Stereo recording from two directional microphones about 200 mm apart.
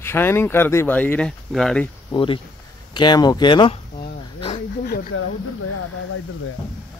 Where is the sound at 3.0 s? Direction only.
20° left (ahead or behind).